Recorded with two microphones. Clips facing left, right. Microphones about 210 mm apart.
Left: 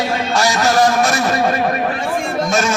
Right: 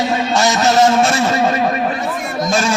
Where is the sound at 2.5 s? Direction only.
30° right (ahead or behind).